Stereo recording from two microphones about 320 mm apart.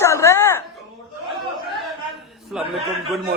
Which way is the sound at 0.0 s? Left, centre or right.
Centre.